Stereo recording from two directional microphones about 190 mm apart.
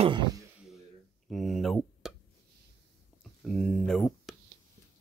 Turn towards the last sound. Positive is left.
turn(degrees=5)  # may be behind; listen again after turning